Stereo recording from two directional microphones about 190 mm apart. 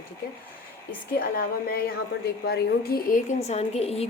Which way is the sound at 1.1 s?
55° left (ahead or behind).